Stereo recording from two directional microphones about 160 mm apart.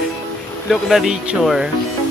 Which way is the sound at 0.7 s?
Centre (ahead or behind).